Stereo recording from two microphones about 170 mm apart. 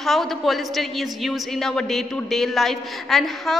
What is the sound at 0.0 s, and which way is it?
A woman's voice, centre (ahead or behind).